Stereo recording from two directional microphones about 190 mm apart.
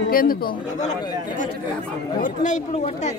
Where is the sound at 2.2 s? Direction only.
40° left (ahead or behind).